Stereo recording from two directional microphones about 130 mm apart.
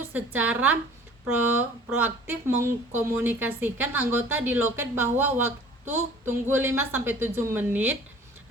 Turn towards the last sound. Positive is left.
turn(degrees=-15)  # may be behind; listen again after turning